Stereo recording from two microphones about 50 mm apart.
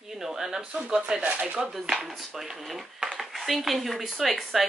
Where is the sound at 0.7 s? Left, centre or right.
Right.